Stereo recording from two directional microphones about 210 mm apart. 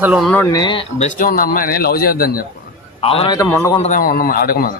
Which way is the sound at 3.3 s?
15° left (ahead or behind).